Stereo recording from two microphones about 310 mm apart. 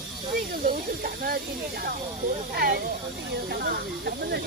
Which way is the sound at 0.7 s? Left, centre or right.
Right.